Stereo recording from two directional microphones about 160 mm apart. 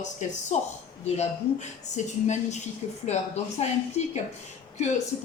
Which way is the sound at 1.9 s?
45° left (ahead or behind).